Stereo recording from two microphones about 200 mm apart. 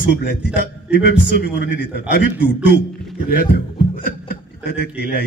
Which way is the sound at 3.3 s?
50° left (ahead or behind).